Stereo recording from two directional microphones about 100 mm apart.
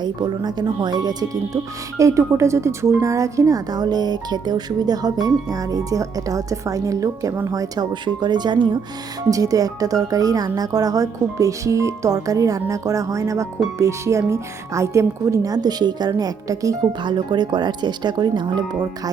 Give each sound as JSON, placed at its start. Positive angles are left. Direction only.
{"t": 0.0, "sound": "speech", "side_deg": -45}
{"t": 2.0, "sound": "a woman's voice", "side_deg": -30}
{"t": 8.0, "sound": "speech", "side_deg": -50}
{"t": 9.3, "sound": "a woman's voice", "side_deg": -35}
{"t": 17.0, "sound": "speech", "side_deg": -50}